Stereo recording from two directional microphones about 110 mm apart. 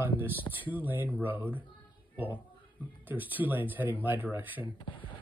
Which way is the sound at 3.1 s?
15° right (ahead or behind).